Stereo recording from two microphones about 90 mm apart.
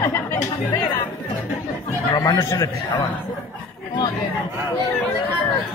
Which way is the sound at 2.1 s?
45° left (ahead or behind).